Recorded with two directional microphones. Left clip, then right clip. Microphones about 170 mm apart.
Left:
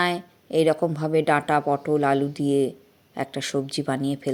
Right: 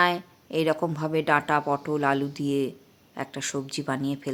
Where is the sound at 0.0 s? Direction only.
15° left (ahead or behind).